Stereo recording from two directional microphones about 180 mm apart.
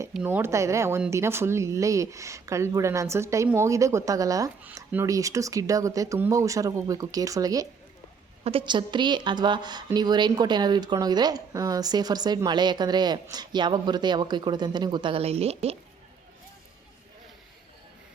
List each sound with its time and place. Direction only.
0.1 s a woman's voice: 10° right (ahead or behind); by 15.7 s 35° right (ahead or behind)